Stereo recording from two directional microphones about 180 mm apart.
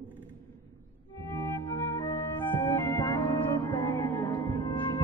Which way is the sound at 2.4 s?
10° left (ahead or behind).